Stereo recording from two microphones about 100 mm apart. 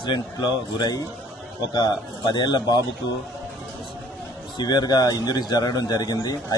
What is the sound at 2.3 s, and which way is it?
Speech, 45° left (ahead or behind).